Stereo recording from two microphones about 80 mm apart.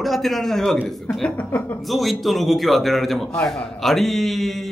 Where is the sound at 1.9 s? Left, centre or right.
Centre.